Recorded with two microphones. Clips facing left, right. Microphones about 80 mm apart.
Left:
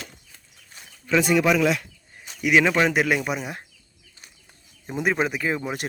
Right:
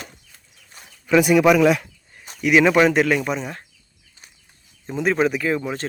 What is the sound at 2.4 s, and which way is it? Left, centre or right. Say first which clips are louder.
Speech: right 4 dB; centre.